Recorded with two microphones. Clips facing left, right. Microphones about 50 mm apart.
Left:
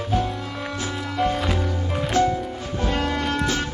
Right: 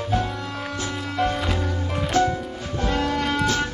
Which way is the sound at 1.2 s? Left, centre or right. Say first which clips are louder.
Left 1 dB; centre.